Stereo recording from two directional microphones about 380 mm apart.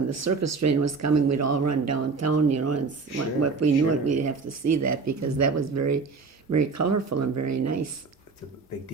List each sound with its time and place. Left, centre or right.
0.1 s speech: right